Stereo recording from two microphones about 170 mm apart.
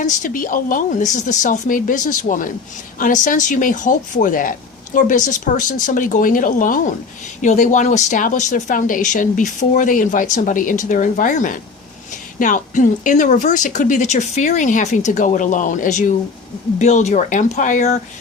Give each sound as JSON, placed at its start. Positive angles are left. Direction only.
{"t": 0.0, "sound": "speech", "side_deg": 50}